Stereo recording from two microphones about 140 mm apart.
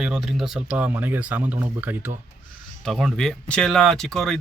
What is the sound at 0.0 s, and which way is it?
Speech, 5° right (ahead or behind).